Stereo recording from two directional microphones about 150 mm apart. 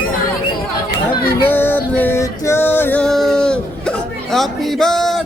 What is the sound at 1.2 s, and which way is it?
Music, 10° left (ahead or behind).